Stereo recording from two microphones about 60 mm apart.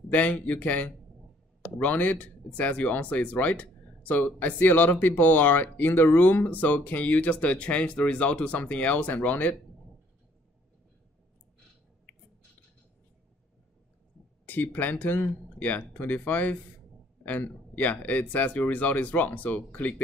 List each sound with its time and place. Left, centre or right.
0.1 s speech: left
14.4 s speech: left